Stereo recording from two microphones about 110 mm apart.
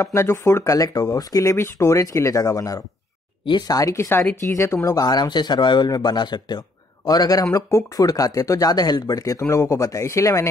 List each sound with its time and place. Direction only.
0.0 s speech: 25° left (ahead or behind)
5.0 s speech: 40° left (ahead or behind)